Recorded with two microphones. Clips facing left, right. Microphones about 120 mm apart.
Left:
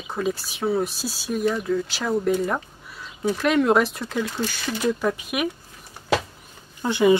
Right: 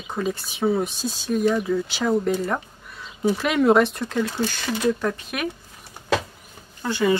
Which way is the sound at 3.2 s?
5° right (ahead or behind).